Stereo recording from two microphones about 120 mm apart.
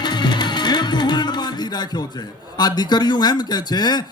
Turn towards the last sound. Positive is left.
turn(degrees=35)  # may be behind; listen again after turning